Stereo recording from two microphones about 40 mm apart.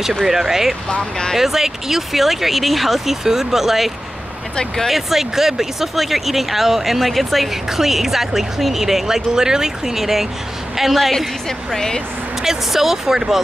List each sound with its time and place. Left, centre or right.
0.2 s speech: centre
0.8 s speech: left
1.4 s a woman's voice: centre
12.4 s speech: centre